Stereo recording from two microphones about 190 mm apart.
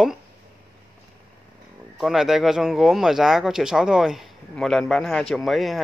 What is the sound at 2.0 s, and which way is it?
Speech, centre (ahead or behind).